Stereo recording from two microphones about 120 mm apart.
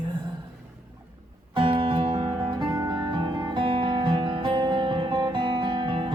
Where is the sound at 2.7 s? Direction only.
30° right (ahead or behind).